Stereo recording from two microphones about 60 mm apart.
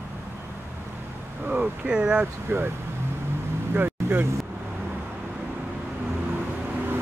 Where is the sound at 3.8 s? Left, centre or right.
Right.